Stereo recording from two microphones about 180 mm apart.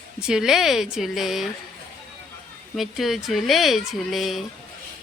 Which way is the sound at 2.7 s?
Centre (ahead or behind).